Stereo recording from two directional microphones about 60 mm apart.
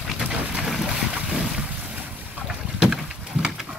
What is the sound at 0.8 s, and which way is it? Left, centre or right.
Boat, centre.